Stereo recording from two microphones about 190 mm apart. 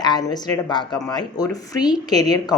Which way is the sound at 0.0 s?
20° left (ahead or behind).